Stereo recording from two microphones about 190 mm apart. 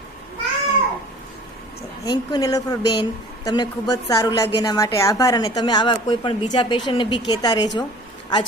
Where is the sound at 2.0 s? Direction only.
25° left (ahead or behind).